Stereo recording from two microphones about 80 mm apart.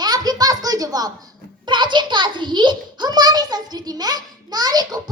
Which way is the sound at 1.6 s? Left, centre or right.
Right.